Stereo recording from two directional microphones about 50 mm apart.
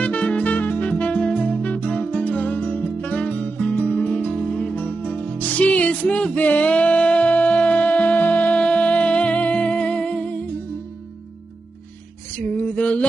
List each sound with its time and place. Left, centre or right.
0.0 s music: left
4.8 s music: left
12.4 s female singing: left